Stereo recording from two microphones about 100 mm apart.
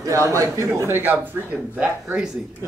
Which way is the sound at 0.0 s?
30° right (ahead or behind).